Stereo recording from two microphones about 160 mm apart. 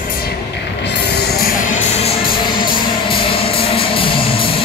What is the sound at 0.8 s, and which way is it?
Music, 90° left.